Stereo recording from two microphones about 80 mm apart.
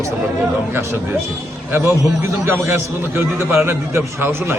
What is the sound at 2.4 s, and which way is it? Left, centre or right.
A man's voice, right.